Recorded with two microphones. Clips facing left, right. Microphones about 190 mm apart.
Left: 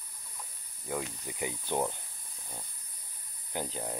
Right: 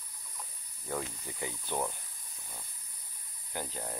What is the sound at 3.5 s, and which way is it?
Speech, 20° left (ahead or behind).